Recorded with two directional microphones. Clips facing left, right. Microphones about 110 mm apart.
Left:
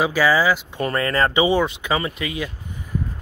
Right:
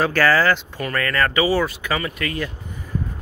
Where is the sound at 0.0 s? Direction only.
10° left (ahead or behind).